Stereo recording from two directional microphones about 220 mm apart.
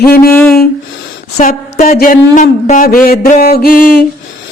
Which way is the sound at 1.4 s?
35° left (ahead or behind).